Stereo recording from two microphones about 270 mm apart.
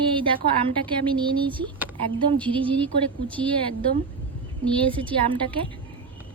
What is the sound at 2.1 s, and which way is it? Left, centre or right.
Speech, centre.